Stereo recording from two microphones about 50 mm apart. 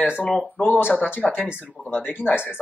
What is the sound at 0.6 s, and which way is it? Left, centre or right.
Speech, left.